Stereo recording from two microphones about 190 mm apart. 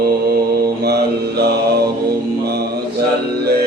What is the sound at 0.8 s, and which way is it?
Mantra, 55° right (ahead or behind).